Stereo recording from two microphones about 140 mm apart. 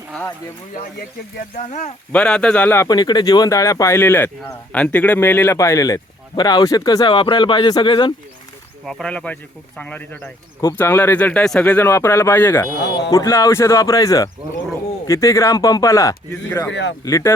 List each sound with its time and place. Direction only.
0.1 s speech: 10° left (ahead or behind)
0.7 s speech: 75° left (ahead or behind); by 2.0 s 60° left (ahead or behind)
2.1 s speech: 5° left (ahead or behind)
2.9 s speech: 30° left (ahead or behind)
8.8 s speech: centre (ahead or behind); by 17.3 s 25° left (ahead or behind)